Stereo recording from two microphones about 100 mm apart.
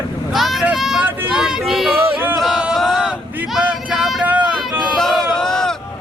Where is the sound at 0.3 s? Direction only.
Centre (ahead or behind).